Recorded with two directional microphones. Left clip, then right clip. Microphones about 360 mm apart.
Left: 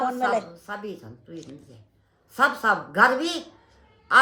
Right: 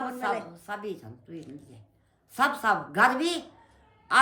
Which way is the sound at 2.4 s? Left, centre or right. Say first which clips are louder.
Left 4 dB; right.